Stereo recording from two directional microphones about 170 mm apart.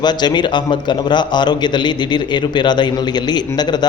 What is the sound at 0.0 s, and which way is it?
A man's voice, 25° left (ahead or behind).